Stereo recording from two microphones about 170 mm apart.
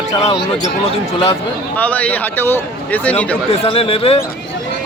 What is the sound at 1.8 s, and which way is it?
Speech, 10° left (ahead or behind).